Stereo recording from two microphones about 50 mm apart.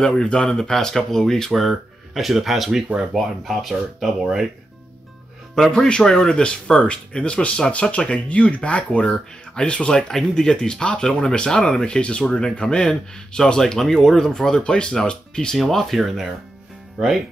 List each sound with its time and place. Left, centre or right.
0.2 s speech: centre
5.9 s speech: centre
15.5 s speech: centre